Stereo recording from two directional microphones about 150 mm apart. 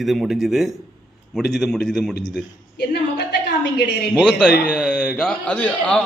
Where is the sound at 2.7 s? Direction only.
90° left.